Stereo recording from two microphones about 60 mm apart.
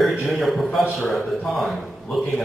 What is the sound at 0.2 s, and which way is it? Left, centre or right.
A man's voice, centre.